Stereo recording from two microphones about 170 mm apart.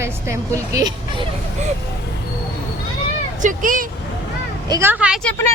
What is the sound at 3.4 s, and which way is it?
Speech, 55° right (ahead or behind).